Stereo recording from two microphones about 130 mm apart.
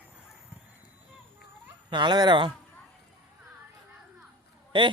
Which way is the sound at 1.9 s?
35° right (ahead or behind).